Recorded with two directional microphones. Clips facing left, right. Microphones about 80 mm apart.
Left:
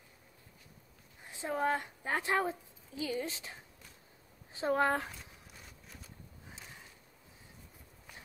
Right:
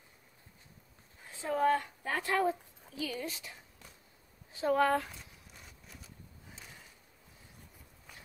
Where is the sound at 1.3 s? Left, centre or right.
Centre.